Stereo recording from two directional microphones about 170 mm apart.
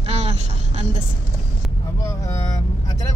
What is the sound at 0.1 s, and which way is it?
Vehicle, 40° right (ahead or behind).